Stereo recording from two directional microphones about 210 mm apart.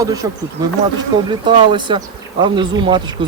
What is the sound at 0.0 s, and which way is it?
Speech, 15° right (ahead or behind).